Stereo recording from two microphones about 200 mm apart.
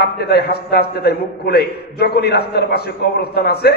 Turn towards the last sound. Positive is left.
turn(degrees=50)  # may be behind; listen again after turning